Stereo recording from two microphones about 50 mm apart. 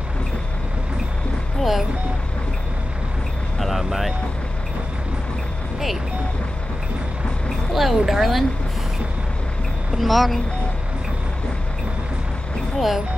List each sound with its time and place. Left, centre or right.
1.6 s speech: centre
3.5 s vehicle: centre
7.7 s speech: centre
9.9 s speech: centre
12.7 s speech: centre